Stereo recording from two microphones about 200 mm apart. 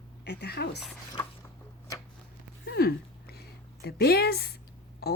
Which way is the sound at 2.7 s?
50° left (ahead or behind).